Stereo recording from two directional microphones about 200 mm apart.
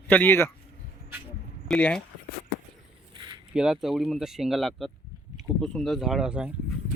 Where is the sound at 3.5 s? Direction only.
Centre (ahead or behind).